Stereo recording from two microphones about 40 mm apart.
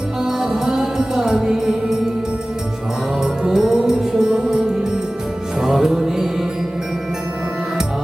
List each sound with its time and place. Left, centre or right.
0.2 s music: centre
3.4 s music: centre